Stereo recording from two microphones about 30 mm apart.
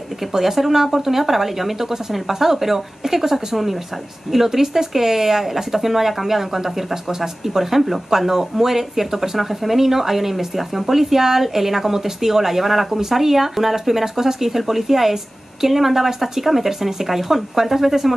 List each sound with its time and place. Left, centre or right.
0.2 s speech: centre